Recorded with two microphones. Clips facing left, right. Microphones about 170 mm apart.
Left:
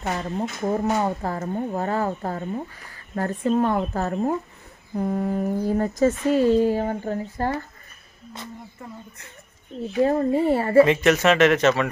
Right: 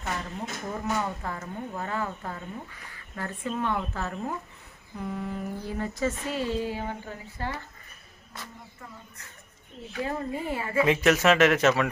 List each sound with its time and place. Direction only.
0.0 s speech: 40° left (ahead or behind)
10.0 s speech: 35° left (ahead or behind)
10.9 s speech: 5° right (ahead or behind)